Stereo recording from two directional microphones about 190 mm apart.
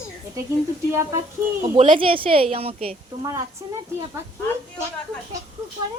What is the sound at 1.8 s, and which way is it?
A woman's voice, 30° right (ahead or behind).